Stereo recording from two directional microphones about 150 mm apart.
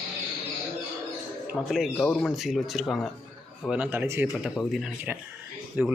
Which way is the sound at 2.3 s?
Centre (ahead or behind).